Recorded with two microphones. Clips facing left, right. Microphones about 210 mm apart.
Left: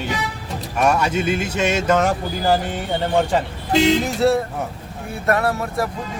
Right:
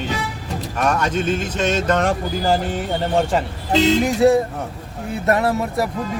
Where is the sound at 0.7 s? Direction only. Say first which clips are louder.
Left 2 dB; 10° left (ahead or behind).